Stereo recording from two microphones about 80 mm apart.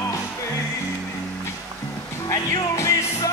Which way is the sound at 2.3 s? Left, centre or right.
Left.